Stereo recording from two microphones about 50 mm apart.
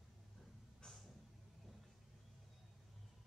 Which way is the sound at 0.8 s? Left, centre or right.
Centre.